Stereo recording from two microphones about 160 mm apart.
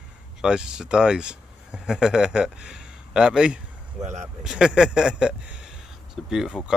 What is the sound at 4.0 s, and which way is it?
Speech, 45° right (ahead or behind).